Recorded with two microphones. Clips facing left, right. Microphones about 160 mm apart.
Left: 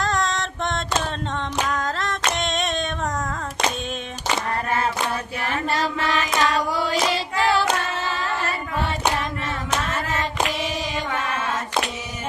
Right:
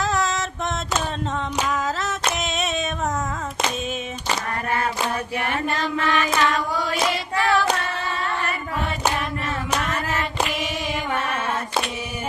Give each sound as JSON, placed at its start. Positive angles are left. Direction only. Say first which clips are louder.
{"t": 0.0, "sound": "a sound", "louder": "right 1 dB", "side_deg": -5}
{"t": 5.5, "sound": "hands", "louder": "left 3 dB", "side_deg": 35}
{"t": 9.8, "sound": "hands", "louder": "even", "side_deg": 35}